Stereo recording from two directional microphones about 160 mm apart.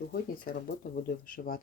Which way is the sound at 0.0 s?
70° left (ahead or behind).